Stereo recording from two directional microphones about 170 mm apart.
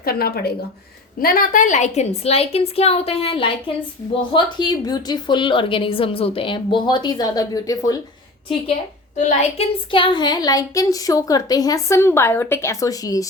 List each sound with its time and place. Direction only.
0.0 s a woman's voice: 60° left (ahead or behind); by 7.9 s 20° left (ahead or behind)
9.1 s a woman's voice: 40° left (ahead or behind); by 13.2 s 20° left (ahead or behind)